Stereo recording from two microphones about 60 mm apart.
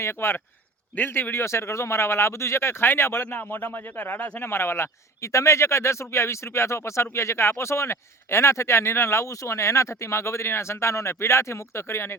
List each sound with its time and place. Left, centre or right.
0.0 s speech: left